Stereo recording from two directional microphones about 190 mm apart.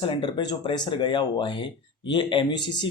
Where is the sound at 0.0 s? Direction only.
25° left (ahead or behind).